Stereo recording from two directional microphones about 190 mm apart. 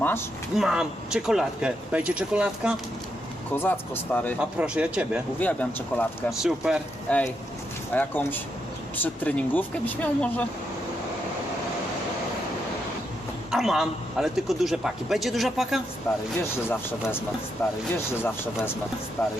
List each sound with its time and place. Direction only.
0.5 s a man's voice: centre (ahead or behind)
3.5 s speech: 10° left (ahead or behind)
4.4 s a man's voice: 5° right (ahead or behind)
5.4 s speech: 10° left (ahead or behind)
7.9 s speech: 10° left (ahead or behind)
13.5 s a man's voice: centre (ahead or behind)
16.1 s speech: 15° left (ahead or behind)
19.2 s speech: 10° left (ahead or behind)